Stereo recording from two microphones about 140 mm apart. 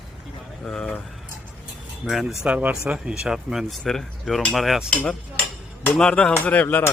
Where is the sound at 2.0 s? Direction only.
Centre (ahead or behind).